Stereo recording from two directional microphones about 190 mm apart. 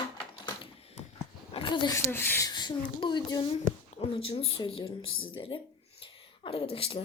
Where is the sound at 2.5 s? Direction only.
20° left (ahead or behind).